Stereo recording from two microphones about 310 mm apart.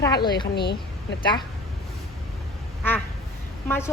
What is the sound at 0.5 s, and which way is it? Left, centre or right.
Speech, left.